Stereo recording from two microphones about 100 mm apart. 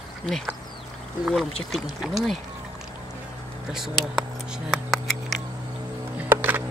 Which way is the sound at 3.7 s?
5° right (ahead or behind).